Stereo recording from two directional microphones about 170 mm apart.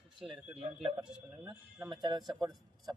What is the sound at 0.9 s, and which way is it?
Speech, 5° right (ahead or behind).